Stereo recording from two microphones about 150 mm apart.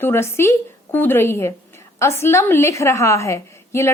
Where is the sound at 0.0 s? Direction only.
15° left (ahead or behind).